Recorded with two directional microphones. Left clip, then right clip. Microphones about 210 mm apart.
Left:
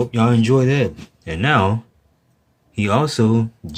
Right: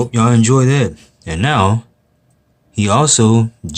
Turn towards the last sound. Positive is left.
turn(degrees=-25)  # may be behind; listen again after turning